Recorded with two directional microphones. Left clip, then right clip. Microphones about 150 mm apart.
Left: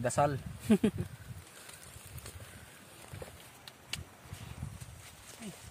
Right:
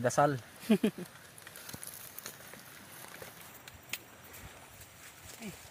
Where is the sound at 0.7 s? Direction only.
5° left (ahead or behind).